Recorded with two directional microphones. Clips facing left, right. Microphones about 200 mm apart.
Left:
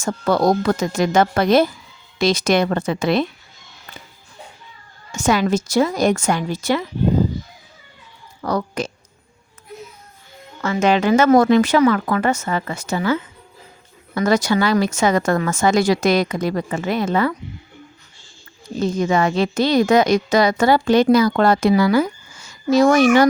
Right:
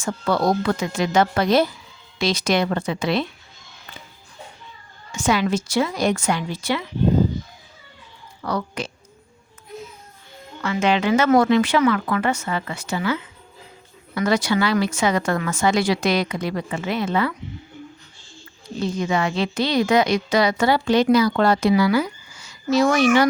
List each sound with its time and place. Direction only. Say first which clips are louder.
0.0 s a woman's voice: left 4 dB; 45° left (ahead or behind)
5.1 s a woman's voice: left 3 dB; 45° left (ahead or behind)
8.4 s a woman's voice: left 4 dB; 45° left (ahead or behind)
10.6 s a woman's voice: left 3 dB; 45° left (ahead or behind)
14.2 s a woman's voice: left 3 dB; 45° left (ahead or behind)
18.8 s a woman's voice: left 4 dB; 45° left (ahead or behind)